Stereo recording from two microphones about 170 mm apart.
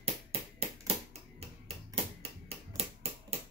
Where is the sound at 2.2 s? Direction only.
35° right (ahead or behind).